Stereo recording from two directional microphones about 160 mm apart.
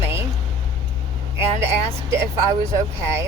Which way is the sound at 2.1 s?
15° right (ahead or behind).